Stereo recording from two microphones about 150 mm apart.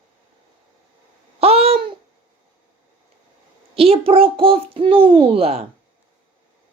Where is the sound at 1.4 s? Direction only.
40° right (ahead or behind).